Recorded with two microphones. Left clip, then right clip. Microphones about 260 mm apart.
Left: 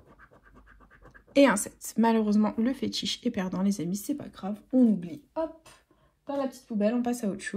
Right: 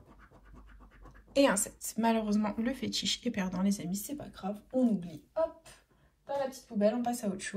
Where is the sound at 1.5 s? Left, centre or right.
Left.